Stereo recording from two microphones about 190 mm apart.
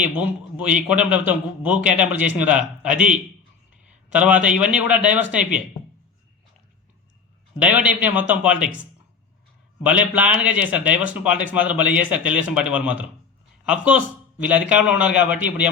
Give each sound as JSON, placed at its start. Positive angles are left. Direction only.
{"t": 0.0, "sound": "a man's voice", "side_deg": -5}
{"t": 7.6, "sound": "a man's voice", "side_deg": -5}